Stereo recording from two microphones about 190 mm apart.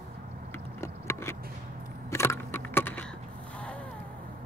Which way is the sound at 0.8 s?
15° left (ahead or behind).